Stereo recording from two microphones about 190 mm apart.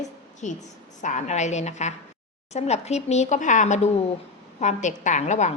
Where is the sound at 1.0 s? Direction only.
40° left (ahead or behind).